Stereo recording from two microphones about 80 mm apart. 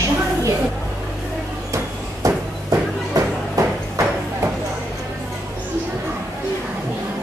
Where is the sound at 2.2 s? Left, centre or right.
Right.